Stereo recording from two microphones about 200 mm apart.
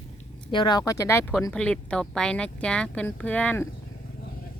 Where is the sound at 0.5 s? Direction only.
20° left (ahead or behind).